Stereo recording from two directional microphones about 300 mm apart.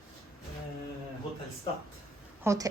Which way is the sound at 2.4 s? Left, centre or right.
Centre.